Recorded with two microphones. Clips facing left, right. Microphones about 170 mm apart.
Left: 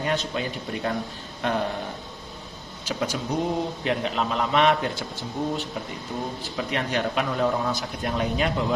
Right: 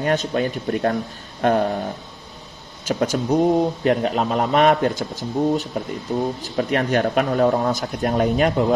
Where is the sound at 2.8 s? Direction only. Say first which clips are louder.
Right 7 dB; 45° right (ahead or behind).